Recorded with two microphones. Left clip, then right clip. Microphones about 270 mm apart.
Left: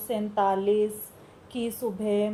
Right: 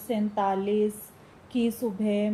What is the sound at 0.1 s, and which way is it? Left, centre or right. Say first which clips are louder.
Speech: left 2 dB; left.